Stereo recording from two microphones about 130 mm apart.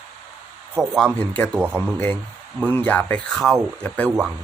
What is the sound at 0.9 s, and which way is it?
Speech, 10° left (ahead or behind).